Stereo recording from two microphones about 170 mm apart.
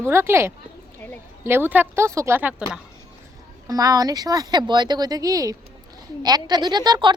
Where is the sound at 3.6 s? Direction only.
20° right (ahead or behind).